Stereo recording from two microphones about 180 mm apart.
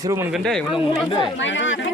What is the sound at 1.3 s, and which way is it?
Speech, 90° left.